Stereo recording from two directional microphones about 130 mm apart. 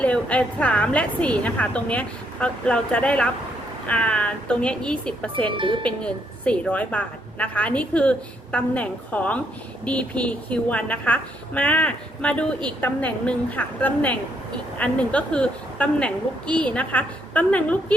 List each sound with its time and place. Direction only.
0.0 s a woman's voice: 10° left (ahead or behind)
5.5 s speech: 40° right (ahead or behind)
5.8 s a woman's voice: 10° left (ahead or behind)